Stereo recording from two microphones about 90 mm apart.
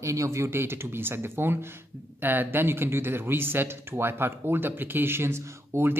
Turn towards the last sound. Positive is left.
turn(degrees=-30)  # may be behind; listen again after turning